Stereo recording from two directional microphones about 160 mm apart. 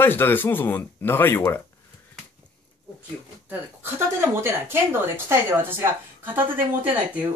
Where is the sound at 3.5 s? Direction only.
15° right (ahead or behind).